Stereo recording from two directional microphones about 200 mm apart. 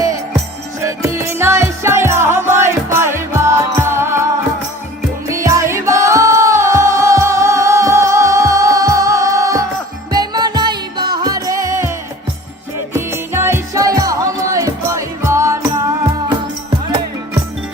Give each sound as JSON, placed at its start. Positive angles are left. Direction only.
{"t": 0.9, "sound": "music", "side_deg": -15}
{"t": 5.3, "sound": "music", "side_deg": -15}